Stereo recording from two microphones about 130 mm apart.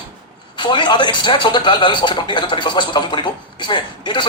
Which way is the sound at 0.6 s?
35° left (ahead or behind).